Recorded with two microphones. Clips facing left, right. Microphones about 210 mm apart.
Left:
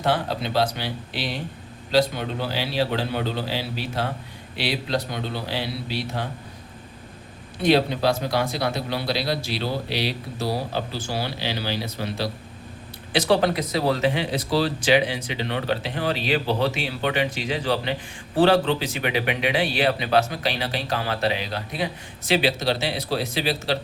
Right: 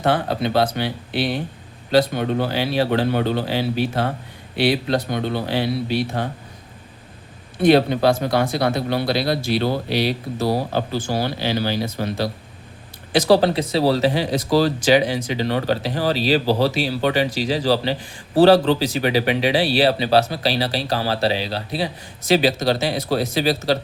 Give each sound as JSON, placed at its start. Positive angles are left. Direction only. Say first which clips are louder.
{"t": 0.0, "sound": "a man's voice", "louder": "right 4 dB", "side_deg": -55}
{"t": 7.6, "sound": "a man's voice", "louder": "right 5 dB", "side_deg": -55}
{"t": 13.1, "sound": "speech", "louder": "right 5 dB", "side_deg": -35}